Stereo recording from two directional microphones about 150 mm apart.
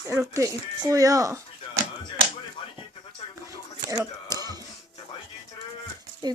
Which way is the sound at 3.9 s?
20° right (ahead or behind).